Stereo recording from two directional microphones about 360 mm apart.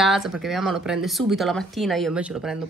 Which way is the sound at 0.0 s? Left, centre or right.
Centre.